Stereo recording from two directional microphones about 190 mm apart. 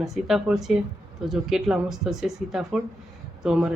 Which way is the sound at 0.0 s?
Centre (ahead or behind).